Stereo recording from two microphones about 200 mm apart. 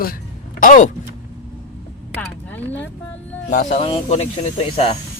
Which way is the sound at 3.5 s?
40° left (ahead or behind).